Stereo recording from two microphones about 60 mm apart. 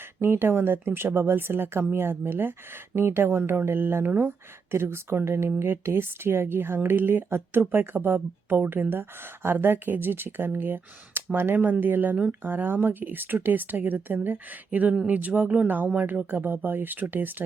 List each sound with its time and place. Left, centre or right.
0.2 s speech: right